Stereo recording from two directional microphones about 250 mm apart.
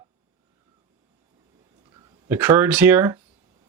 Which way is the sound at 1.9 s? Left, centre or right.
Centre.